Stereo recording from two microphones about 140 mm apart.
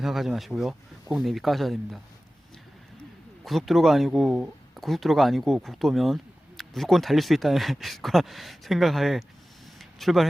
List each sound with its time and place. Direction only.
0.0 s speech: centre (ahead or behind)
3.4 s speech: centre (ahead or behind)
9.7 s a sound: centre (ahead or behind)